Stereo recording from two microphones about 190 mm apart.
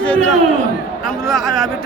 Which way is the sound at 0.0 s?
5° left (ahead or behind).